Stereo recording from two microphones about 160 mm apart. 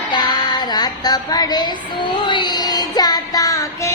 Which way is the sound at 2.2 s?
30° left (ahead or behind).